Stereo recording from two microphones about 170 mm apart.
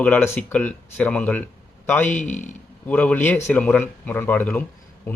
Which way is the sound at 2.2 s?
45° left (ahead or behind).